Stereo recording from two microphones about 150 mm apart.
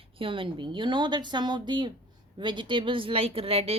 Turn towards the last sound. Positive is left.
turn(degrees=-40)  # may be behind; listen again after turning